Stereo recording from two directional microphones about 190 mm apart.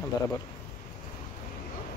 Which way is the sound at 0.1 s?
20° left (ahead or behind).